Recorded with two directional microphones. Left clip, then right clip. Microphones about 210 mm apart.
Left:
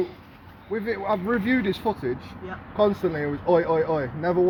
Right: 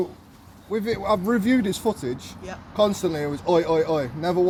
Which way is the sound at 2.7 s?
90° right.